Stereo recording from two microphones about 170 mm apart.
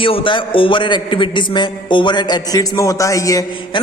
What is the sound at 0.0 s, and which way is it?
A man's voice, 30° left (ahead or behind).